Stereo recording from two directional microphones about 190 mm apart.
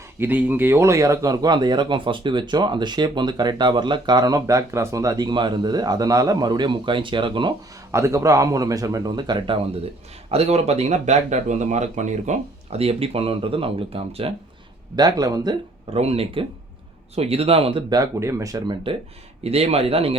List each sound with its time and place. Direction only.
0.2 s speech: 10° right (ahead or behind); by 7.5 s 25° right (ahead or behind)
7.9 s speech: 15° right (ahead or behind)
15.9 s speech: 30° right (ahead or behind)